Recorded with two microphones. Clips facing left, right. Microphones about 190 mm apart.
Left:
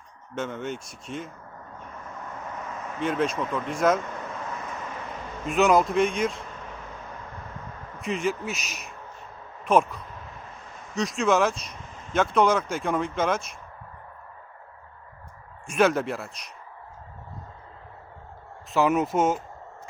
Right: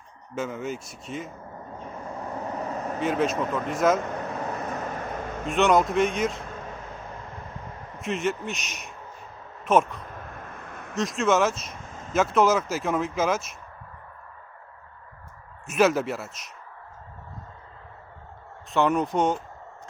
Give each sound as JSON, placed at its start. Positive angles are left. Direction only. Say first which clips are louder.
{"t": 0.3, "sound": "speech", "louder": "right 1 dB", "side_deg": -5}
{"t": 1.8, "sound": "vehicle", "louder": "right 5 dB", "side_deg": -35}
{"t": 3.0, "sound": "speech", "louder": "right 1 dB", "side_deg": 0}
{"t": 4.7, "sound": "vehicle", "louder": "right 4 dB", "side_deg": -40}
{"t": 5.5, "sound": "speech", "louder": "even", "side_deg": 0}
{"t": 8.0, "sound": "speech", "louder": "even", "side_deg": 0}
{"t": 10.2, "sound": "a sound", "louder": "right 3 dB", "side_deg": -55}
{"t": 10.9, "sound": "speech", "louder": "even", "side_deg": 0}
{"t": 15.6, "sound": "speech", "louder": "right 1 dB", "side_deg": -5}
{"t": 18.7, "sound": "speech", "louder": "left 1 dB", "side_deg": 5}